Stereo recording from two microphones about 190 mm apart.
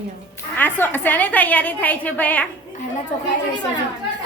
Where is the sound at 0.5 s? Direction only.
10° left (ahead or behind).